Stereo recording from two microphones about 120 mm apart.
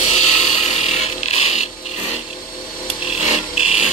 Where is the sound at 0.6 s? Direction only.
70° left (ahead or behind).